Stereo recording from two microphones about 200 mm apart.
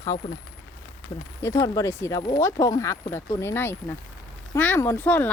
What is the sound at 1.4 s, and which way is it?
Speech, 15° left (ahead or behind).